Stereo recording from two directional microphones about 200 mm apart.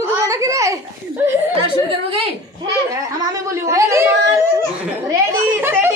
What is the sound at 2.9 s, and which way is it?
Speech, 15° right (ahead or behind).